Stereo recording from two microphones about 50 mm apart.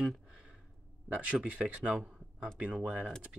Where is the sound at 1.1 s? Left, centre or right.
Right.